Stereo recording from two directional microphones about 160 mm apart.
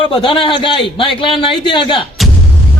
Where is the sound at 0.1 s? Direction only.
35° left (ahead or behind).